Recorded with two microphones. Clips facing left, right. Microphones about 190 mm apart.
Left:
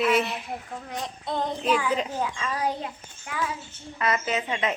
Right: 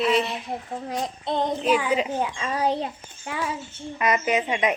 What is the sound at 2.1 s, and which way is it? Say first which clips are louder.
A child's voice: right 3 dB; 25° right (ahead or behind).